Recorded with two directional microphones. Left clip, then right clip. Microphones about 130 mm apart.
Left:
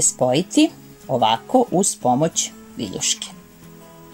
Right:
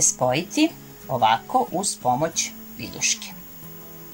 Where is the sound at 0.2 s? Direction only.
35° left (ahead or behind).